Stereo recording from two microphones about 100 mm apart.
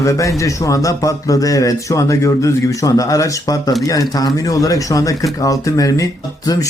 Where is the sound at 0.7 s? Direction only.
35° left (ahead or behind).